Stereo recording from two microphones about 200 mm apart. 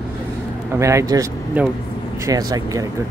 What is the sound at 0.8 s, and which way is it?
Speech, 15° right (ahead or behind).